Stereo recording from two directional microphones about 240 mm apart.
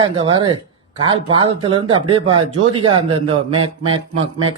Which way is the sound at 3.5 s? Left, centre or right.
Right.